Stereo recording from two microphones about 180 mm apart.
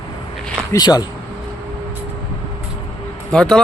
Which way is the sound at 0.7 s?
20° left (ahead or behind).